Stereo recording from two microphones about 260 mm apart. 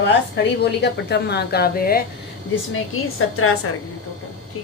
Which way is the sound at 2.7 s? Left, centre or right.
Left.